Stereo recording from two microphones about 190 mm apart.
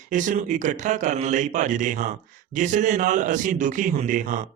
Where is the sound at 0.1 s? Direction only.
40° right (ahead or behind).